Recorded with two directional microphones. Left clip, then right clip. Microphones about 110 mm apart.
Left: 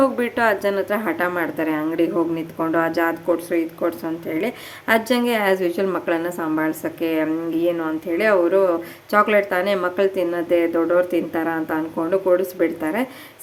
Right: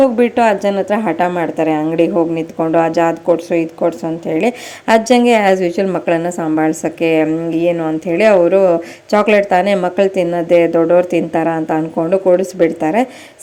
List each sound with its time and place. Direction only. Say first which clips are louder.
0.0 s a woman's voice: right 7 dB; 30° right (ahead or behind)